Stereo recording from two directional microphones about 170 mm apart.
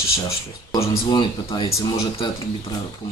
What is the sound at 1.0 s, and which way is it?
Speech, 25° left (ahead or behind).